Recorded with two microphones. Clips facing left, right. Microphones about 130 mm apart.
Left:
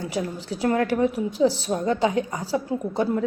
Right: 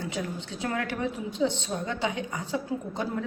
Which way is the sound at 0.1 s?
90° left.